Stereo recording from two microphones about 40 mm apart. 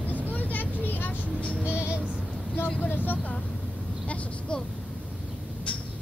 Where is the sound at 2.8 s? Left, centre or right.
Left.